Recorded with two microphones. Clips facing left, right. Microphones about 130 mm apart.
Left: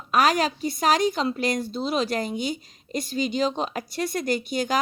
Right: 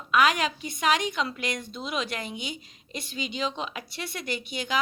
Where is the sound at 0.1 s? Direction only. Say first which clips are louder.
Left 2 dB; 40° left (ahead or behind).